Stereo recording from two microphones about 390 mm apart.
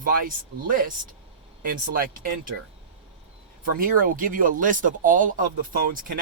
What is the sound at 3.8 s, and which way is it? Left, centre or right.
Speech, right.